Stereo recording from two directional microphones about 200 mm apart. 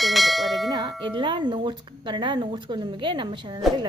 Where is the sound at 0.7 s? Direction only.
20° right (ahead or behind).